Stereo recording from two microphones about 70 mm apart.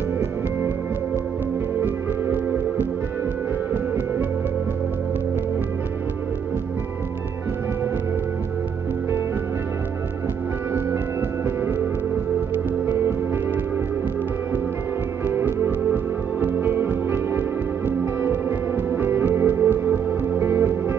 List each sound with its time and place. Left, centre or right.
1.8 s music: right
12.8 s music: right
15.2 s music: right